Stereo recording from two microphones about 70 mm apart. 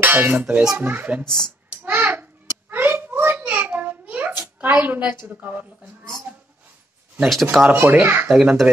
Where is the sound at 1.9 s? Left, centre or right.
Right.